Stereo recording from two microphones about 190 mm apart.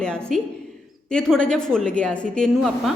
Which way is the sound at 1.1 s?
5° left (ahead or behind).